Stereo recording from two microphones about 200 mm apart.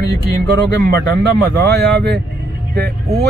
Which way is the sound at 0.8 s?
55° right (ahead or behind).